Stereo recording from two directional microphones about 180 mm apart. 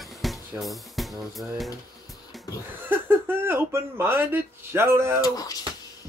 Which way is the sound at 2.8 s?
10° right (ahead or behind).